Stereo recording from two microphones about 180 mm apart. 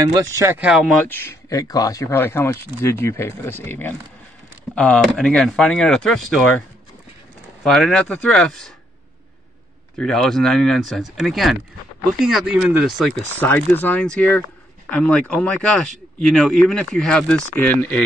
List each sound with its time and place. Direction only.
0.0 s speech: 20° right (ahead or behind)
0.7 s speech: 5° right (ahead or behind)
1.0 s speech: 10° left (ahead or behind)
7.6 s speech: centre (ahead or behind)
9.9 s speech: 5° left (ahead or behind)
13.4 s speech: 10° left (ahead or behind)